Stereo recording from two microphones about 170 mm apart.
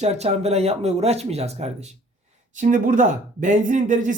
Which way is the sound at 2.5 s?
50° right (ahead or behind).